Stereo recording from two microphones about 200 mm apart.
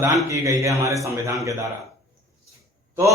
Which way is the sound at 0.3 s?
15° right (ahead or behind).